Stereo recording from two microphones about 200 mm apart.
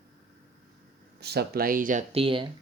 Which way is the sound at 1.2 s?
55° right (ahead or behind).